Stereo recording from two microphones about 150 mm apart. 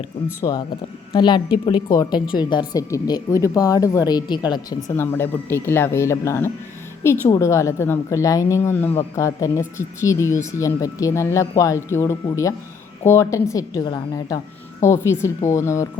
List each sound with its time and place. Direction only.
0.4 s a woman's voice: 25° left (ahead or behind)
4.9 s a woman's voice: 15° left (ahead or behind)